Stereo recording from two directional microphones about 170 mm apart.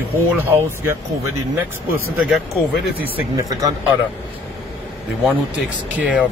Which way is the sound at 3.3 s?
20° right (ahead or behind).